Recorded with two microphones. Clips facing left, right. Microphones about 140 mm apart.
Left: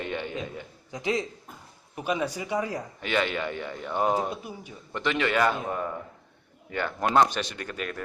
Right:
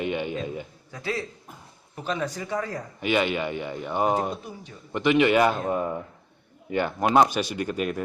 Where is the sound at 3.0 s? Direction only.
10° right (ahead or behind).